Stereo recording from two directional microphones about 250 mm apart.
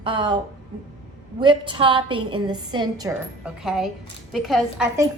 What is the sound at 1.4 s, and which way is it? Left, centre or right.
Speech, centre.